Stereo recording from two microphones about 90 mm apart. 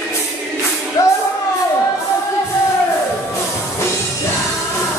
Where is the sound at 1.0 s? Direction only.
40° left (ahead or behind).